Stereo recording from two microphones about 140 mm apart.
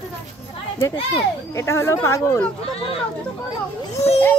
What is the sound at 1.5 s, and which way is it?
Speech, 20° left (ahead or behind).